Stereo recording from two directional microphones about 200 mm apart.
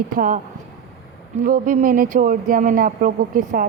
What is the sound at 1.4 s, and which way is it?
A woman's voice, 40° right (ahead or behind).